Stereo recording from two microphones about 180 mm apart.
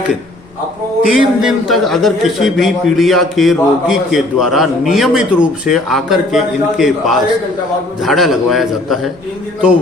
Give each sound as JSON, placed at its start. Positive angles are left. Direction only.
{"t": 1.0, "sound": "a man's voice", "side_deg": -5}